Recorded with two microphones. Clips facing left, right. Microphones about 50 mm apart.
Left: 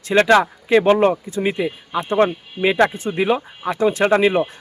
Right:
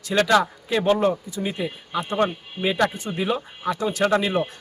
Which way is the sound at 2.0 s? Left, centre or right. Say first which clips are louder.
Left 5 dB; left.